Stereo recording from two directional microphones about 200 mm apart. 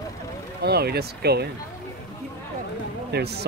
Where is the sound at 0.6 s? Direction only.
55° right (ahead or behind).